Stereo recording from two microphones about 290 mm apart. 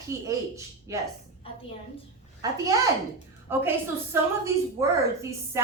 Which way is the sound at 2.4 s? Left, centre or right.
Centre.